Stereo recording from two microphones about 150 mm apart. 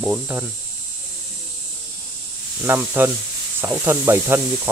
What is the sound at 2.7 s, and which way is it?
Sizzle, 15° right (ahead or behind).